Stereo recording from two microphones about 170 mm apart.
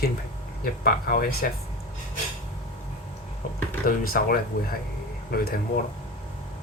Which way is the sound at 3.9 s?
55° left (ahead or behind).